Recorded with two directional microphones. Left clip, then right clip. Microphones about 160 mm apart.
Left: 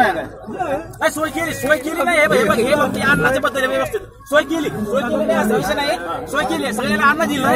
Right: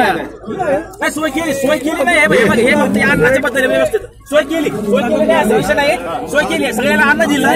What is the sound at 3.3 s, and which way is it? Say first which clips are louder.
A man's voice: right 5 dB; 15° left (ahead or behind).